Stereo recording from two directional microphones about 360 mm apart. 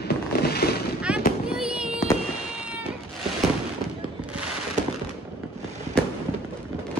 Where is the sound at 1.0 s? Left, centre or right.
Centre.